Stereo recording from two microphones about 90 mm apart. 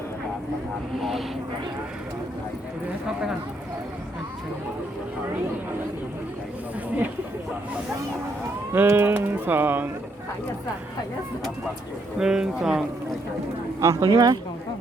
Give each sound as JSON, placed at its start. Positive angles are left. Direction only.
{"t": 0.9, "sound": "speech", "side_deg": 0}
{"t": 8.7, "sound": "speech", "side_deg": -25}
{"t": 12.2, "sound": "speech", "side_deg": -5}
{"t": 13.8, "sound": "speech", "side_deg": -40}